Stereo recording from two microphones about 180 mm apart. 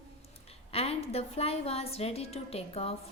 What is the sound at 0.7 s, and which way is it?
A woman's voice, 35° left (ahead or behind).